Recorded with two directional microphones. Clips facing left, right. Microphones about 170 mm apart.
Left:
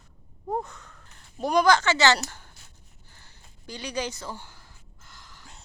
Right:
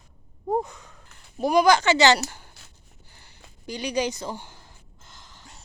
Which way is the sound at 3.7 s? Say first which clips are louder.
Right 5 dB; 15° right (ahead or behind).